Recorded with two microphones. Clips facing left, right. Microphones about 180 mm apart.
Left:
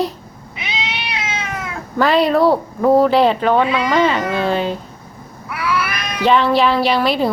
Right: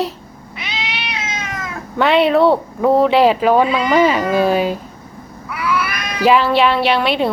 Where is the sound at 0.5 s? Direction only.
20° left (ahead or behind).